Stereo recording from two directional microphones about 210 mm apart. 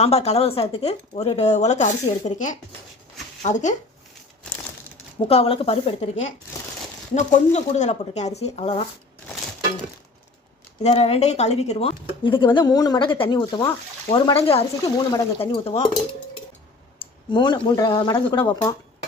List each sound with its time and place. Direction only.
0.0 s speech: 30° left (ahead or behind)
5.3 s speech: 25° left (ahead or behind)
10.8 s speech: 30° left (ahead or behind)
17.2 s speech: 20° left (ahead or behind)